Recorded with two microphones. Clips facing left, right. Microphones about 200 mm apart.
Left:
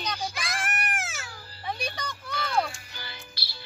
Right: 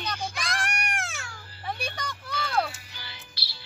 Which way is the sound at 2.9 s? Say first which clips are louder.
Left 3 dB; 50° left (ahead or behind).